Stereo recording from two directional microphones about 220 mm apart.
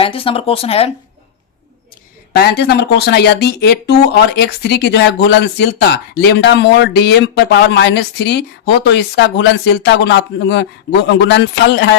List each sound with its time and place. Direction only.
0.0 s speech: 25° left (ahead or behind)
2.3 s speech: 45° left (ahead or behind)